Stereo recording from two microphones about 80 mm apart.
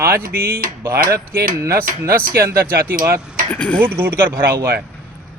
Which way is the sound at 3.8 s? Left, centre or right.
Right.